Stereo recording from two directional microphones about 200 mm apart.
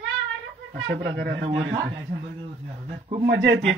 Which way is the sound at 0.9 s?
50° right (ahead or behind).